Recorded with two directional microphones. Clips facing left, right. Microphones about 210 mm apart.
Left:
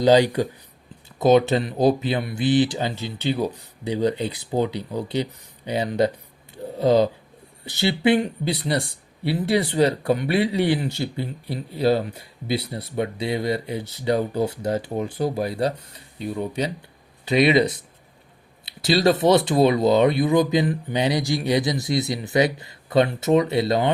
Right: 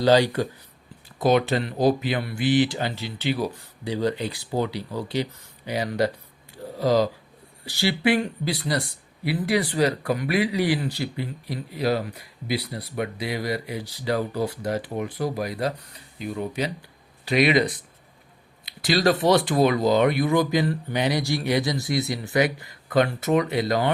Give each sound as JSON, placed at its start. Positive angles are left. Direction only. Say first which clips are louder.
{"t": 0.0, "sound": "speech", "louder": "left 2 dB", "side_deg": 15}
{"t": 6.5, "sound": "a sound", "louder": "left 3 dB", "side_deg": 25}
{"t": 7.6, "sound": "speech", "louder": "left 2 dB", "side_deg": 25}